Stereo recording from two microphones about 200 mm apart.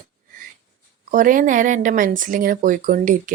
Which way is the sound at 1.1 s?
40° right (ahead or behind).